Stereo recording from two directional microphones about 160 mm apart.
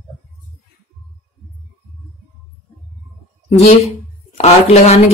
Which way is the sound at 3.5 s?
40° left (ahead or behind).